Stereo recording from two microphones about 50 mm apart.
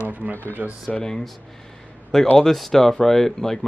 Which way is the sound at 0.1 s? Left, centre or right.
Right.